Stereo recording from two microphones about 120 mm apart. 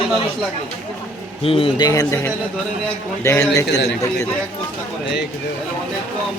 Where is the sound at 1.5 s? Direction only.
50° left (ahead or behind).